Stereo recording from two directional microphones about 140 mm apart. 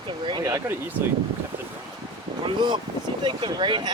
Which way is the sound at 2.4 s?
35° right (ahead or behind).